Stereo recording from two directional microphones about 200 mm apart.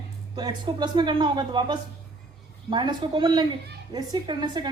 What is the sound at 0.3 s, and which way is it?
A woman's voice, 20° right (ahead or behind).